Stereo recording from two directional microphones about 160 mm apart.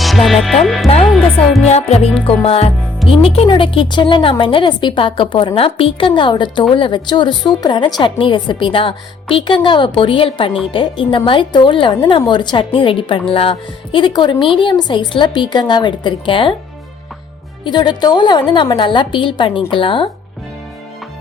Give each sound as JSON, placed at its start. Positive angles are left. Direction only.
{"t": 0.0, "sound": "music", "side_deg": 0}
{"t": 1.6, "sound": "a woman's voice", "side_deg": 40}
{"t": 17.6, "sound": "a woman's voice", "side_deg": 30}